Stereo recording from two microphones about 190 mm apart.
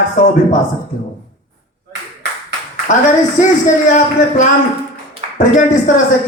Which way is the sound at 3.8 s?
40° left (ahead or behind).